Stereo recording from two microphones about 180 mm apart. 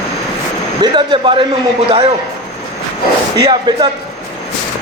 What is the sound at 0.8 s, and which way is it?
Speech, 25° right (ahead or behind).